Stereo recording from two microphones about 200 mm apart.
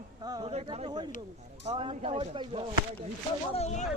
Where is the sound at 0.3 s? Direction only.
20° right (ahead or behind).